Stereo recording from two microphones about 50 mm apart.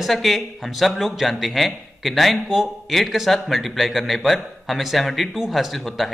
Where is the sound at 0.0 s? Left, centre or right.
Centre.